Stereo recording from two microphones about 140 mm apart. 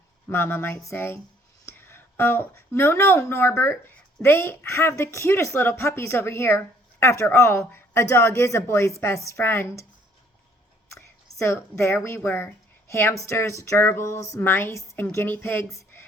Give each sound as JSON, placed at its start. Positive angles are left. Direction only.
{"t": 0.3, "sound": "a woman's voice", "side_deg": 15}
{"t": 10.9, "sound": "a sound", "side_deg": 20}
{"t": 12.0, "sound": "a woman's voice", "side_deg": 15}